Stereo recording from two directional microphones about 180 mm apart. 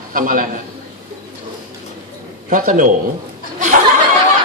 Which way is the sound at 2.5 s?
50° right (ahead or behind).